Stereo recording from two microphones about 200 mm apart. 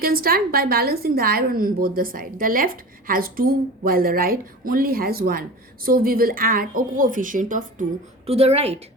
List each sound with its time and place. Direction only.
0.0 s a woman's voice: 50° right (ahead or behind)
8.3 s a woman's voice: 30° right (ahead or behind)